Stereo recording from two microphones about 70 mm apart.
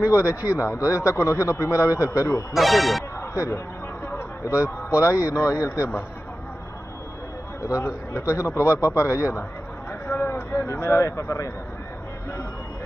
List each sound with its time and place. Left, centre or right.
0.0 s a man's voice: left
2.5 s speech: centre
3.2 s music: left
5.0 s a man's voice: left
7.6 s a man's voice: left
10.0 s a sound: left
10.5 s a man's voice: left